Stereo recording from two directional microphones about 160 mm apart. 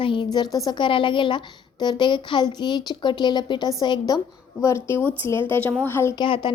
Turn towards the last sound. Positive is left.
turn(degrees=30)  # may be behind; listen again after turning